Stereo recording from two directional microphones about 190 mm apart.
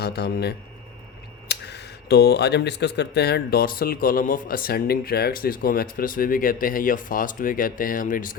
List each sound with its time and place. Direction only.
0.0 s a man's voice: 60° left (ahead or behind)